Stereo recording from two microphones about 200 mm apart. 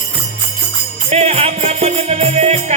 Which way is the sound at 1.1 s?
30° right (ahead or behind).